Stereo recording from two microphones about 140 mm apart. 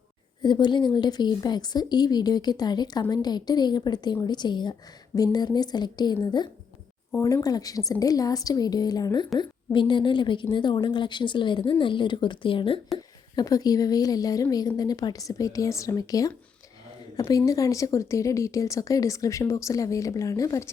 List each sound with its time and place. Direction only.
0.4 s a woman's voice: 35° left (ahead or behind)
13.3 s a woman's voice: 25° left (ahead or behind)